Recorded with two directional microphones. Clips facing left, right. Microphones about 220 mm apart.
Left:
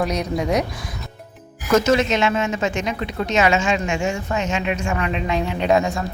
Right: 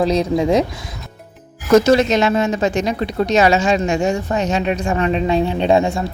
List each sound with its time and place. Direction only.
0.0 s speech: 30° right (ahead or behind)
1.8 s speech: 35° right (ahead or behind)